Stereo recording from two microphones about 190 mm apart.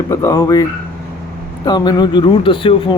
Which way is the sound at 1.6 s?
20° left (ahead or behind).